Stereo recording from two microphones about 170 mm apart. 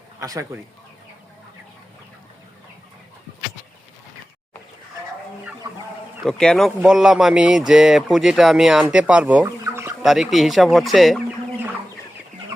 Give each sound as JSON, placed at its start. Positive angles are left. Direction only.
{"t": 0.2, "sound": "speech", "side_deg": -20}
{"t": 6.2, "sound": "speech", "side_deg": 5}
{"t": 10.0, "sound": "speech", "side_deg": 0}